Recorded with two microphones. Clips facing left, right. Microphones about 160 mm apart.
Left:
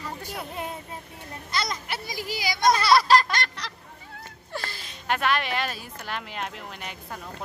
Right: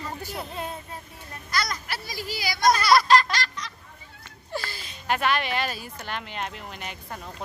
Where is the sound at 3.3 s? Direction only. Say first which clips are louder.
Left 1 dB; 65° left (ahead or behind).